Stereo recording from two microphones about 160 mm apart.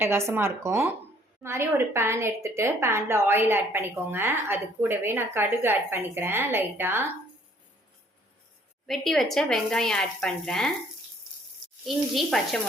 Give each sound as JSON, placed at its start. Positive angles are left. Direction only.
{"t": 0.0, "sound": "a woman's voice", "side_deg": -15}
{"t": 8.9, "sound": "speech", "side_deg": 0}
{"t": 11.9, "sound": "speech", "side_deg": 0}